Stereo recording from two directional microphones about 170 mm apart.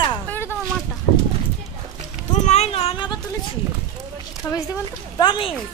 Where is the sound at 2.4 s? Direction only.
40° left (ahead or behind).